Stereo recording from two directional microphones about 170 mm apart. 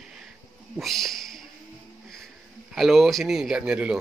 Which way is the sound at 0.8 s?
Centre (ahead or behind).